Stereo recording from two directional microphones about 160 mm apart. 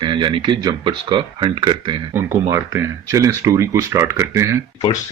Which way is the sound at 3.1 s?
20° right (ahead or behind).